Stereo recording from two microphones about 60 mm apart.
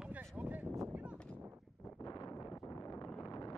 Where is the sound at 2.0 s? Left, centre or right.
Left.